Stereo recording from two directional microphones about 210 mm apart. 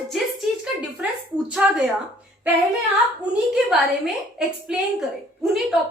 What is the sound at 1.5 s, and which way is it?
Speech, centre (ahead or behind).